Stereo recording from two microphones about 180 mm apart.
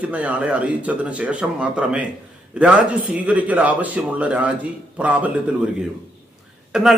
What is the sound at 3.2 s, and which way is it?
Speech, 10° right (ahead or behind).